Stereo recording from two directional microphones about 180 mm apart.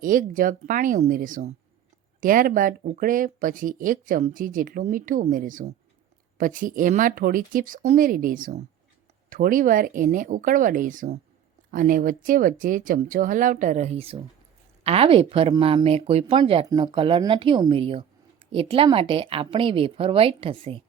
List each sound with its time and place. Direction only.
0.0 s a woman's voice: 50° right (ahead or behind); by 20.8 s 30° right (ahead or behind)